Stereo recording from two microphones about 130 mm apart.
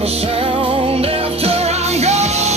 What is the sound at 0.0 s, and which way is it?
Music, 50° right (ahead or behind).